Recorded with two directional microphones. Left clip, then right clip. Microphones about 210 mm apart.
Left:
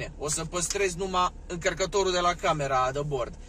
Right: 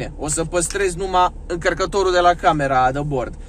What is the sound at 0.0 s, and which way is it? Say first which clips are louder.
Speech: right 8 dB; 35° right (ahead or behind).